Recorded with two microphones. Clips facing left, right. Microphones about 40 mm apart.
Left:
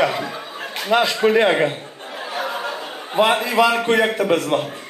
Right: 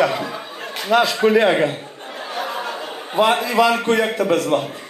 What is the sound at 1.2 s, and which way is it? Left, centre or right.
Speech, centre.